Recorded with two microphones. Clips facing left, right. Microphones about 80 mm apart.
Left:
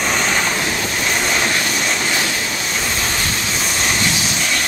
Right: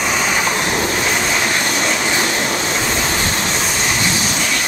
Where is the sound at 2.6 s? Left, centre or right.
Right.